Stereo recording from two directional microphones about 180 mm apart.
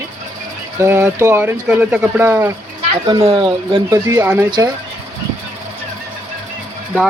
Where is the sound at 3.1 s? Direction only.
25° right (ahead or behind).